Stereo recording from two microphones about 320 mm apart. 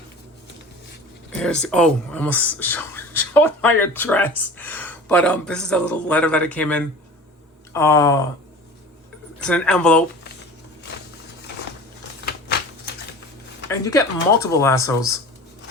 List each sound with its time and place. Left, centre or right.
1.4 s speech: centre
9.5 s speech: centre
12.2 s scissors: left
13.7 s speech: centre